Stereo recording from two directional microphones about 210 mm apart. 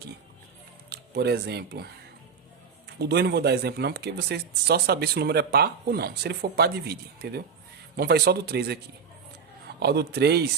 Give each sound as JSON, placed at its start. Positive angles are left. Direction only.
{"t": 0.9, "sound": "speech", "side_deg": -50}
{"t": 3.0, "sound": "speech", "side_deg": -50}
{"t": 9.8, "sound": "speech", "side_deg": -50}